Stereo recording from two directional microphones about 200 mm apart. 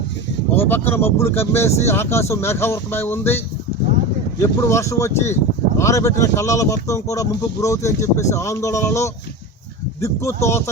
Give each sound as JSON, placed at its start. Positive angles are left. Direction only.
{"t": 0.5, "sound": "speech", "side_deg": 10}